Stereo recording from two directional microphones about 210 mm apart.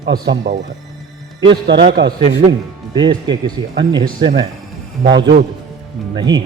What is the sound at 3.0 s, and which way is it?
Speech, 20° right (ahead or behind).